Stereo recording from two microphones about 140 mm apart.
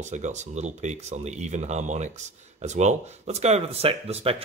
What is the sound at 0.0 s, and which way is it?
Speech, 55° right (ahead or behind).